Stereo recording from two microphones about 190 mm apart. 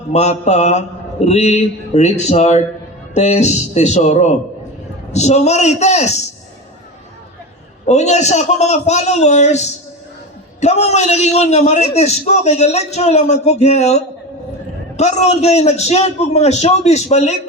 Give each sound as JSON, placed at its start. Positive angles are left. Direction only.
{"t": 0.1, "sound": "a man's voice", "side_deg": 35}
{"t": 7.9, "sound": "a man's voice", "side_deg": 35}